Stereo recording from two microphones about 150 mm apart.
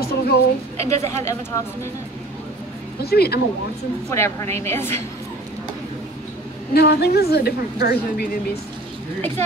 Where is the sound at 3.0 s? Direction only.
90° left.